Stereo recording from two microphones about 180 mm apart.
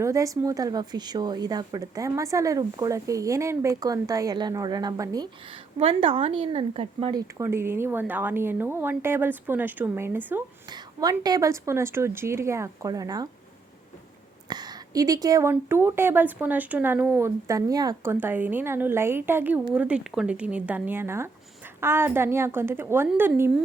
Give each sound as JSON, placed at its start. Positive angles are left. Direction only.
{"t": 0.0, "sound": "a woman's voice", "side_deg": -20}
{"t": 10.7, "sound": "speech", "side_deg": -20}
{"t": 14.5, "sound": "speech", "side_deg": -20}